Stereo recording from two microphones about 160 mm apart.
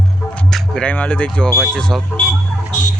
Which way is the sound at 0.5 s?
5° left (ahead or behind).